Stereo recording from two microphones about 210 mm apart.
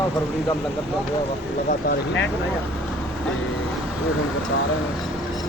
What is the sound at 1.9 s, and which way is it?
Speech, 60° left (ahead or behind).